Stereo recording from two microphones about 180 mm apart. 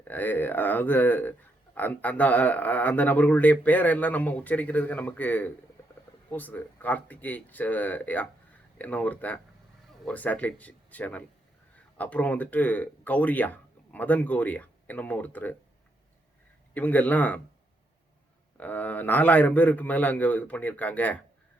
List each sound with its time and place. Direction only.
0.0 s speech: 10° left (ahead or behind)
16.7 s speech: 10° left (ahead or behind)
18.5 s speech: 10° left (ahead or behind)